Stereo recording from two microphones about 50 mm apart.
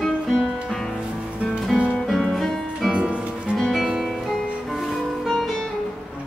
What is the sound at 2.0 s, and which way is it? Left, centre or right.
Music, centre.